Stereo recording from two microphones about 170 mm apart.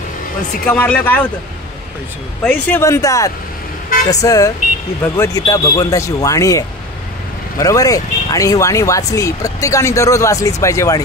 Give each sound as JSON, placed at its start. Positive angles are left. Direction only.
{"t": 0.7, "sound": "speech", "side_deg": 10}
{"t": 2.4, "sound": "speech", "side_deg": 15}